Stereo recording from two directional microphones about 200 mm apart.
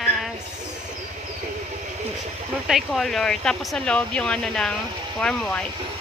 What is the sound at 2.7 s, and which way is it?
Speech, centre (ahead or behind).